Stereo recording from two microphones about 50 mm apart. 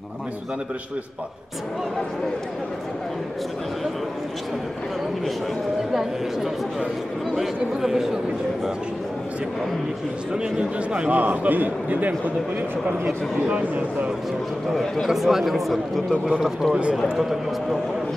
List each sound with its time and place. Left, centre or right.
7.3 s speech: centre
10.3 s a man's voice: centre
14.7 s speech: centre
15.0 s a man's voice: centre